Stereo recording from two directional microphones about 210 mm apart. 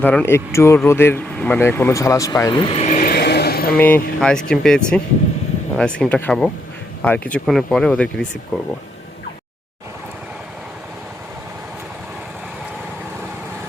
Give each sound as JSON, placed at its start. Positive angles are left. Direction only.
{"t": 0.0, "sound": "speech", "side_deg": 10}
{"t": 3.8, "sound": "speech", "side_deg": 10}